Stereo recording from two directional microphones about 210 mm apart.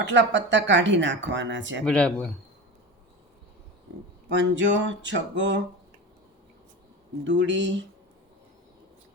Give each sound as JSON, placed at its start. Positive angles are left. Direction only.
{"t": 0.0, "sound": "speech", "side_deg": -60}
{"t": 1.8, "sound": "speech", "side_deg": 5}
{"t": 4.3, "sound": "speech", "side_deg": -60}
{"t": 7.3, "sound": "speech", "side_deg": -60}